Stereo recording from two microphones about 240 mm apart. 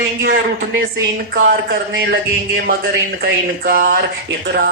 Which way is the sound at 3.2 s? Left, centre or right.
Right.